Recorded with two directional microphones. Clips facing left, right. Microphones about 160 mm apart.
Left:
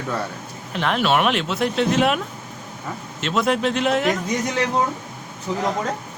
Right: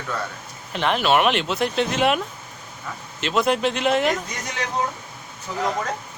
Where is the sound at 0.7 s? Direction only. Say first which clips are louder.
Even; centre (ahead or behind).